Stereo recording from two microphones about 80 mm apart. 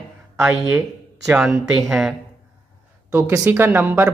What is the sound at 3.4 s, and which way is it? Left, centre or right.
Speech, right.